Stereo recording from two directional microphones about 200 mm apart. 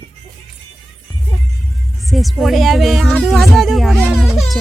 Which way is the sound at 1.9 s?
Centre (ahead or behind).